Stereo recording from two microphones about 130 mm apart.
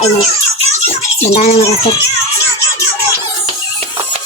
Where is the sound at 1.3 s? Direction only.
55° left (ahead or behind).